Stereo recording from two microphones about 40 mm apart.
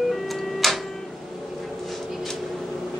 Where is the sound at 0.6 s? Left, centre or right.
Centre.